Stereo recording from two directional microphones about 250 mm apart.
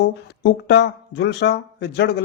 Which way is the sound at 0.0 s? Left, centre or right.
Left.